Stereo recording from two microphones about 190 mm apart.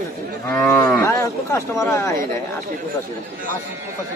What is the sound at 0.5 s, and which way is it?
Speech, 10° left (ahead or behind).